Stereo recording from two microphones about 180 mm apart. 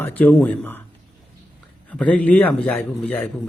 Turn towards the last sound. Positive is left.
turn(degrees=10)  # may be behind; listen again after turning